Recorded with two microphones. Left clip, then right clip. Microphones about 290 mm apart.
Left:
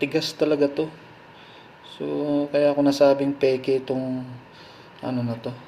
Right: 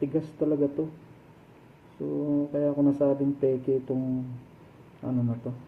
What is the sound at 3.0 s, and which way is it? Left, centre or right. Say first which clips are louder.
Speech: left 7 dB; left.